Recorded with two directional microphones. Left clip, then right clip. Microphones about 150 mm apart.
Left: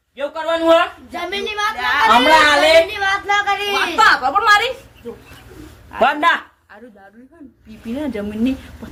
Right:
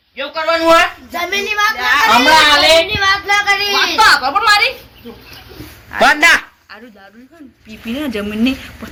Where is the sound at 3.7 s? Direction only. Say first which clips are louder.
Right 2 dB; 10° left (ahead or behind).